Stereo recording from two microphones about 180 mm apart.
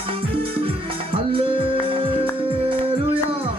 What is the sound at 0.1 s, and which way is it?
Music, 30° right (ahead or behind).